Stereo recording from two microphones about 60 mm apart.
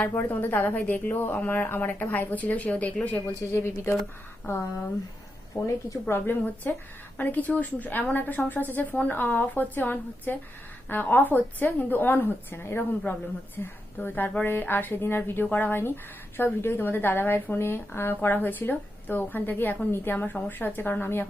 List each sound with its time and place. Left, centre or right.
0.1 s a woman's voice: left
3.5 s speech: left
5.5 s a woman's voice: left
6.1 s a woman's voice: left